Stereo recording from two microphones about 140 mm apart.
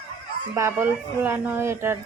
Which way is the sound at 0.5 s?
20° right (ahead or behind).